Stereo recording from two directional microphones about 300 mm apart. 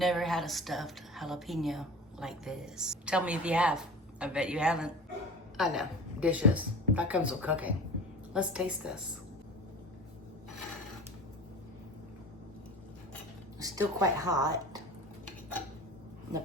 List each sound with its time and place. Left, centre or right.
0.0 s a woman's voice: centre
13.6 s speech: centre